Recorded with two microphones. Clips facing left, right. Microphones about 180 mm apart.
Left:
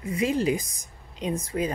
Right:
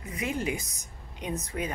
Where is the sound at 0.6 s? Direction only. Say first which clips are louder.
Right 1 dB; 90° left.